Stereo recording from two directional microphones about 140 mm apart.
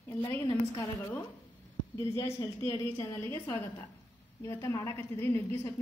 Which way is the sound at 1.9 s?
20° left (ahead or behind).